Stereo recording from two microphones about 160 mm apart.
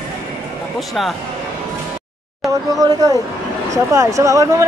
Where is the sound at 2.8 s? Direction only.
25° right (ahead or behind).